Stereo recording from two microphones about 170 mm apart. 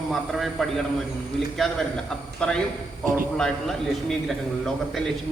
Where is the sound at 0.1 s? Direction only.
Centre (ahead or behind).